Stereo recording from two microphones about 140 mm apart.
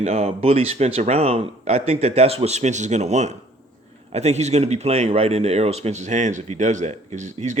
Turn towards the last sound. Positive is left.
turn(degrees=-60)  # may be behind; listen again after turning